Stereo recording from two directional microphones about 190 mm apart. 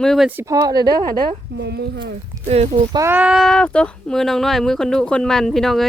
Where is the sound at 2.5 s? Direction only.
35° right (ahead or behind).